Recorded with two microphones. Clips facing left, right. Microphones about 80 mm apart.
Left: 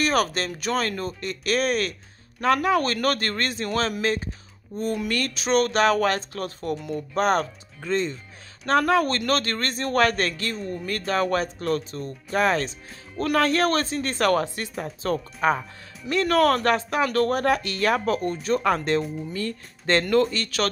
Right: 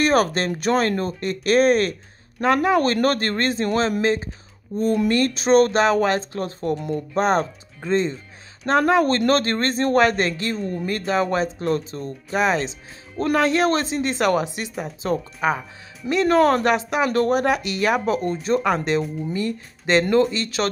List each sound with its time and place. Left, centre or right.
0.0 s speech: right
12.3 s speech: centre
16.1 s speech: right
16.6 s speech: centre
18.9 s speech: centre
19.3 s speech: centre